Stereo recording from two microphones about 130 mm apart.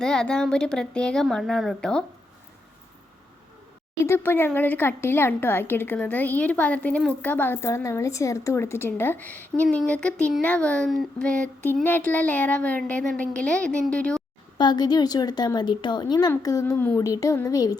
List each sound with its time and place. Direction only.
0.0 s speech: 5° left (ahead or behind)
4.0 s speech: 15° left (ahead or behind)
14.6 s a woman's voice: 35° left (ahead or behind)
16.7 s speech: 15° left (ahead or behind)
17.0 s speech: 25° left (ahead or behind)